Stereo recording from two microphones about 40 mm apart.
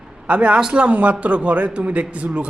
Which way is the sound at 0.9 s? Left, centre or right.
Right.